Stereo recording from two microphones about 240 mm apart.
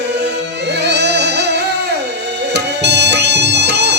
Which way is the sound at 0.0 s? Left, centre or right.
Right.